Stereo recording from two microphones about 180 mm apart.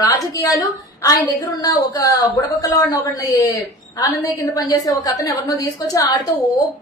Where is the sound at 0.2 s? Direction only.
20° left (ahead or behind).